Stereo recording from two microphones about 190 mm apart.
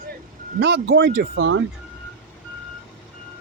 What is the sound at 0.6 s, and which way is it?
Speech, 65° right (ahead or behind).